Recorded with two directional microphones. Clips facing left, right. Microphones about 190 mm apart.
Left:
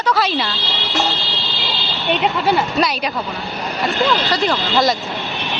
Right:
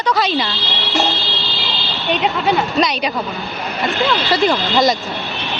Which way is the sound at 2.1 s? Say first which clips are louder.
Even; centre (ahead or behind).